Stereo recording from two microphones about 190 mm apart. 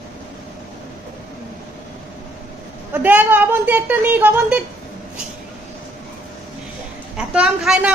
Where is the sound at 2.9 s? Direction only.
10° right (ahead or behind).